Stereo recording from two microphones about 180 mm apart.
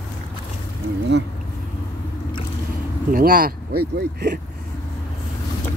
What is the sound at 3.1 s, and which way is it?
Speech, 55° right (ahead or behind).